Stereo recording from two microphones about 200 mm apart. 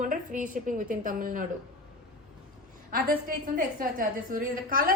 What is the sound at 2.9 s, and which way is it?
A woman's voice, 50° right (ahead or behind).